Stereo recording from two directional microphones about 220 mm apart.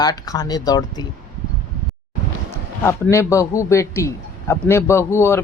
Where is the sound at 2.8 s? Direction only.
10° left (ahead or behind).